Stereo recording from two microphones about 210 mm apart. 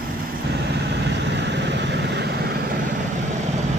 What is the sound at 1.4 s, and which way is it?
Vehicle, 55° right (ahead or behind).